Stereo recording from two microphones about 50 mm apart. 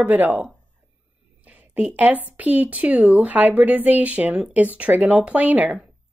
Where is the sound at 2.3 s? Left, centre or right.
Right.